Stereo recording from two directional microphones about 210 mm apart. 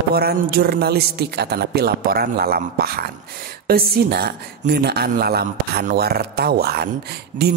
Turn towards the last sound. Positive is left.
turn(degrees=-50)  # may be behind; listen again after turning